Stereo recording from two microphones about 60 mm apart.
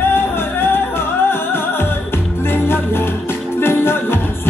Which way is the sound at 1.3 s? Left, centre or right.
Left.